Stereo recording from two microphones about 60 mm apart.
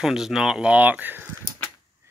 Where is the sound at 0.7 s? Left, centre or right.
Right.